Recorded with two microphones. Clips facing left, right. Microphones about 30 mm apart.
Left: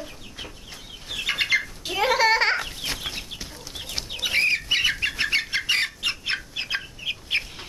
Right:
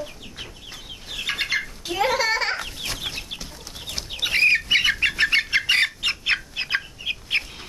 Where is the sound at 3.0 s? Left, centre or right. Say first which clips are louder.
Right 2 dB; centre.